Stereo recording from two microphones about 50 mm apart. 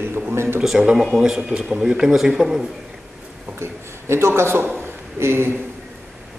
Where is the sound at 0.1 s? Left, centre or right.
Right.